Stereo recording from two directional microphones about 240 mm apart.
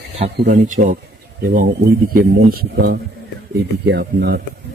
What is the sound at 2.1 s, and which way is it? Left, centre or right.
Speech, right.